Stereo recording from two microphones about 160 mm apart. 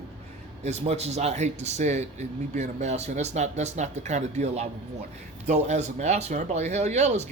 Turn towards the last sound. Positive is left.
turn(degrees=-45)  # may be behind; listen again after turning